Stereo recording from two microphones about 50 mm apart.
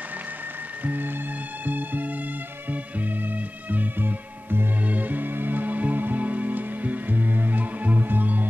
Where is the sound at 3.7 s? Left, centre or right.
Right.